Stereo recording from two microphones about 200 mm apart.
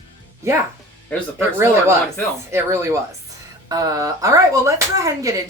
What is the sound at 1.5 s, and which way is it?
Speech, 15° right (ahead or behind).